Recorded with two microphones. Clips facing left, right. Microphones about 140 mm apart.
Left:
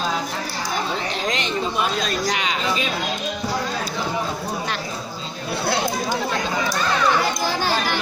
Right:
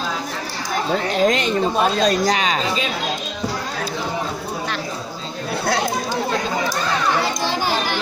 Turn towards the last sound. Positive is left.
turn(degrees=-15)  # may be behind; listen again after turning